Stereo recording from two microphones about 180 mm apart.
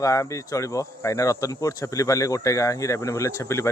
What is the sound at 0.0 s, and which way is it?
Speech, 20° left (ahead or behind).